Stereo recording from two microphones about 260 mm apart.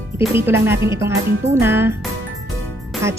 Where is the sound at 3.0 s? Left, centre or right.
Centre.